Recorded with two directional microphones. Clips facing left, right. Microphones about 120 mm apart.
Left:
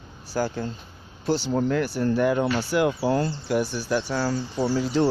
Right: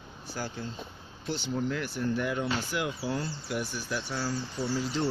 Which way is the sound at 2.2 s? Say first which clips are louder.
Left 8 dB; 70° left (ahead or behind).